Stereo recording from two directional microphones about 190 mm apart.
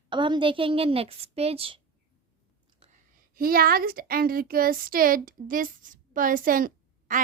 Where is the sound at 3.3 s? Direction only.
50° right (ahead or behind).